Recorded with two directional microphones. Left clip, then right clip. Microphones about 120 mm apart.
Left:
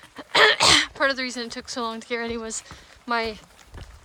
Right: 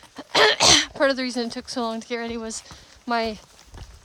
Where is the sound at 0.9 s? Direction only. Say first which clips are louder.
Right 2 dB; 40° right (ahead or behind).